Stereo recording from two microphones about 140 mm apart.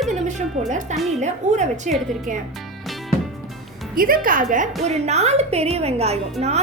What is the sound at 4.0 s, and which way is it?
Speech, 90° right.